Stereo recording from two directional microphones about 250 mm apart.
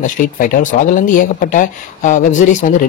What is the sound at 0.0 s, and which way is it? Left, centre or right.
Speech, left.